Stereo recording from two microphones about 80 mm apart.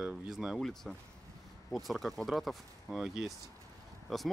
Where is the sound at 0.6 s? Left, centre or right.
Centre.